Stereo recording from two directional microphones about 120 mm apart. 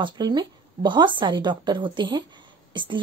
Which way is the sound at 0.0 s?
35° right (ahead or behind).